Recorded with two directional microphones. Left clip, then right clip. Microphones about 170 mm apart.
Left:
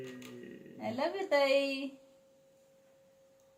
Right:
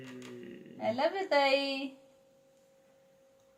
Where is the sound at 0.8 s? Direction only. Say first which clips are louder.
Right 4 dB; 25° right (ahead or behind).